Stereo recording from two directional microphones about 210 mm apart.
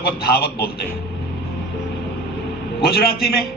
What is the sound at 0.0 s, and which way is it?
Speech, 50° left (ahead or behind).